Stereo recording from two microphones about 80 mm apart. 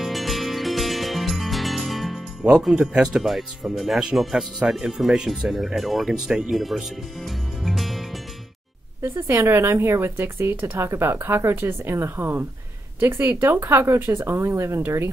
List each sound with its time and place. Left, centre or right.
0.0 s music: centre
2.4 s speech: centre
7.2 s music: centre
9.0 s speech: right